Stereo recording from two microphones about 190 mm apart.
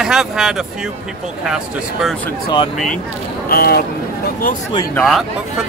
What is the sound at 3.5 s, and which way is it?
Speech, 55° left (ahead or behind).